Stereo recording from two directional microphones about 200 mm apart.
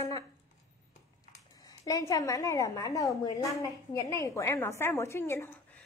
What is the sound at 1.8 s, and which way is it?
A woman's voice, 15° left (ahead or behind).